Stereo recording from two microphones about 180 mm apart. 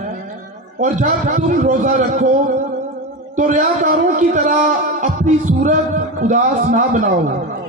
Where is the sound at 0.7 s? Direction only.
45° right (ahead or behind).